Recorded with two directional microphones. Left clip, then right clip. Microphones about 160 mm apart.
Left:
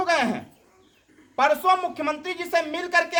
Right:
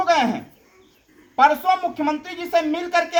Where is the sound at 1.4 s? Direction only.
20° left (ahead or behind).